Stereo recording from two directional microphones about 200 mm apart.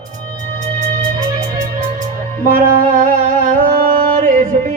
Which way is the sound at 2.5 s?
45° right (ahead or behind).